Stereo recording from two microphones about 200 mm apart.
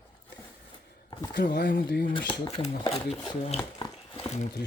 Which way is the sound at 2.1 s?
25° left (ahead or behind).